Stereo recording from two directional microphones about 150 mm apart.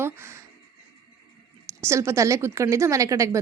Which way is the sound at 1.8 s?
20° right (ahead or behind).